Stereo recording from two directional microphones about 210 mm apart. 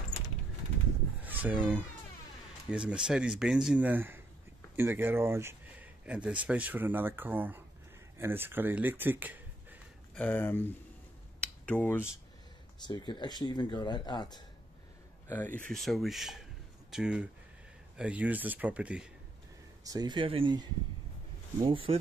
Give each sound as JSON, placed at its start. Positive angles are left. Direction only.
{"t": 1.2, "sound": "a sound", "side_deg": -10}
{"t": 2.7, "sound": "speech", "side_deg": -5}
{"t": 10.1, "sound": "speech", "side_deg": 10}
{"t": 12.8, "sound": "speech", "side_deg": 20}
{"t": 15.2, "sound": "speech", "side_deg": 10}
{"t": 19.8, "sound": "speech", "side_deg": -20}